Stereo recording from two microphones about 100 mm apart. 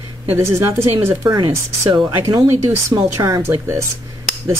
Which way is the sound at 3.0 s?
35° right (ahead or behind).